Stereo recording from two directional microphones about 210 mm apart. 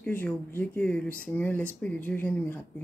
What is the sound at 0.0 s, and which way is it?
Speech, 10° left (ahead or behind).